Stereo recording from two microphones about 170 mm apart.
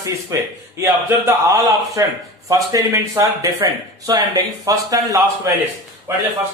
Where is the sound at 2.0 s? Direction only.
20° right (ahead or behind).